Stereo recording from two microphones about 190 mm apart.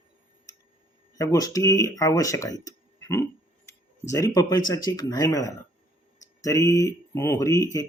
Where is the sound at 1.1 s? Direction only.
15° left (ahead or behind).